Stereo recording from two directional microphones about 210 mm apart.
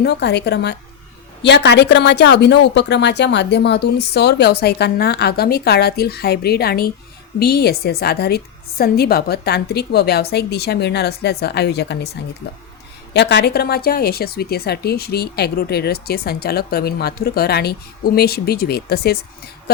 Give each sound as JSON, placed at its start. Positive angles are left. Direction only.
{"t": 0.0, "sound": "a woman's voice", "side_deg": 55}
{"t": 13.1, "sound": "a woman's voice", "side_deg": 50}